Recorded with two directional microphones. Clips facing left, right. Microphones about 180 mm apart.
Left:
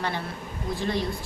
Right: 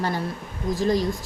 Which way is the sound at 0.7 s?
40° right (ahead or behind).